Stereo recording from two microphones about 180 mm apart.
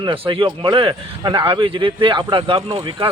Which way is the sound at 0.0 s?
30° right (ahead or behind).